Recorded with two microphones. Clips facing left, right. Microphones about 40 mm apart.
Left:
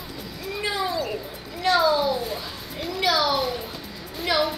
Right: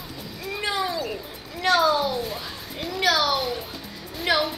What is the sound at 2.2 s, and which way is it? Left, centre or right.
Children playing, centre.